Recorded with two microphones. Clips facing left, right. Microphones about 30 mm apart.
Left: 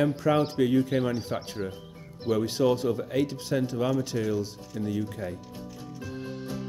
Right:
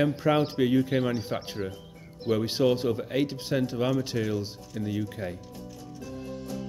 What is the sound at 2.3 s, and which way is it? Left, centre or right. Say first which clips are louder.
Speech: even; centre.